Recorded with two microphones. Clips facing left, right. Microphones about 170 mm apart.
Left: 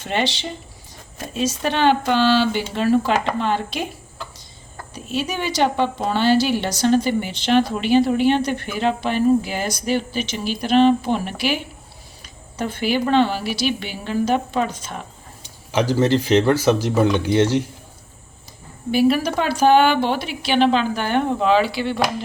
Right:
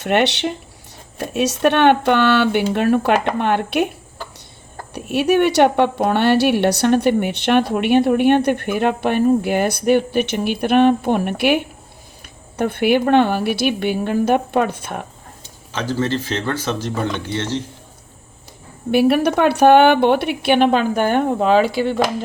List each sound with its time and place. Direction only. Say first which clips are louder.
0.0 s a woman's voice: right 6 dB; 70° right (ahead or behind)
4.9 s a woman's voice: right 9 dB; 65° right (ahead or behind)
15.4 s speech: left 4 dB; 15° left (ahead or behind)
18.9 s a woman's voice: right 3 dB; 60° right (ahead or behind)